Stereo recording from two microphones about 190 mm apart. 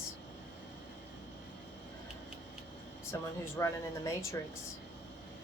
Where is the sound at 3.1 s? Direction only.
15° left (ahead or behind).